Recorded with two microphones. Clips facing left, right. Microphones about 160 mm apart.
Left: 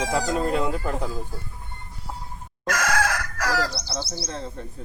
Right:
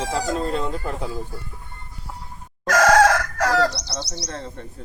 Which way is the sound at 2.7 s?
85° right.